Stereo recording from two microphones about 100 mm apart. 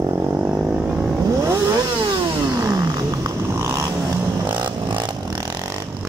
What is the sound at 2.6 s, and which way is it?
Vehicle, 35° right (ahead or behind).